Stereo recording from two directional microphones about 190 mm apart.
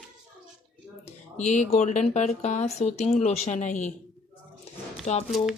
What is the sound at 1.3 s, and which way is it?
Speech, 35° left (ahead or behind).